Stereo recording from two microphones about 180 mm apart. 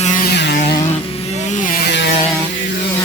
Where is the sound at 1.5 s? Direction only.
50° left (ahead or behind).